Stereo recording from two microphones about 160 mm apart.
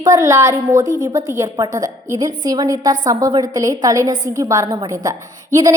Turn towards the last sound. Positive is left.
turn(degrees=-20)  # may be behind; listen again after turning